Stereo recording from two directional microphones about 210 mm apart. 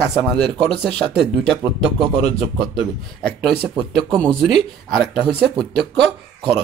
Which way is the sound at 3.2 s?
Centre (ahead or behind).